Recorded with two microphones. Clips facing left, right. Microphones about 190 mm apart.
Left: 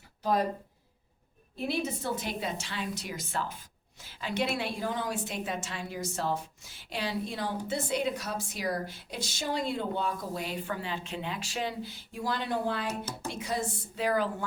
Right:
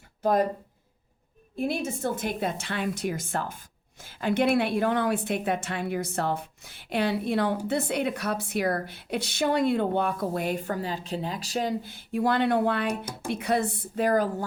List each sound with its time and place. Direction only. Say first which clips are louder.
0.2 s speech: right 5 dB; 50° right (ahead or behind)
1.5 s a woman's voice: right 3 dB; 50° right (ahead or behind)
12.9 s speech: right 5 dB; 15° right (ahead or behind)
13.3 s a woman's voice: right 9 dB; 60° right (ahead or behind); by 14.4 s 45° right (ahead or behind)